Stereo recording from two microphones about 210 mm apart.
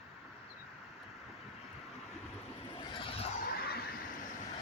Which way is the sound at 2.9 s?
25° left (ahead or behind).